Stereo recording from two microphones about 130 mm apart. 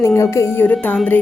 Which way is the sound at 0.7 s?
5° left (ahead or behind).